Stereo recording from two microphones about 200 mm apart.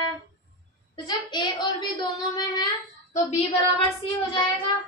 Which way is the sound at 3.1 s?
30° left (ahead or behind).